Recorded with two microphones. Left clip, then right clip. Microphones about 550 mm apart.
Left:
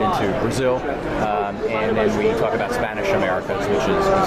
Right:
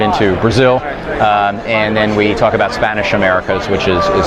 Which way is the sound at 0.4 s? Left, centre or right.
Right.